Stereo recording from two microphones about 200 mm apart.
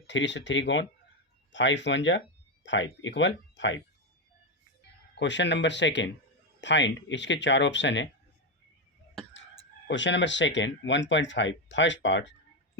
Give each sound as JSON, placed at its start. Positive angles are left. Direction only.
{"t": 0.1, "sound": "speech", "side_deg": 65}
{"t": 5.2, "sound": "speech", "side_deg": 60}
{"t": 9.8, "sound": "speech", "side_deg": 65}